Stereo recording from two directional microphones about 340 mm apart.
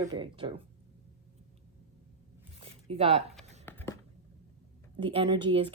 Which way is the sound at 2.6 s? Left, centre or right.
Centre.